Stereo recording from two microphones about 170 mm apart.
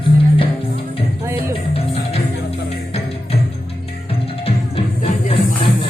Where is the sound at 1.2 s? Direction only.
15° right (ahead or behind).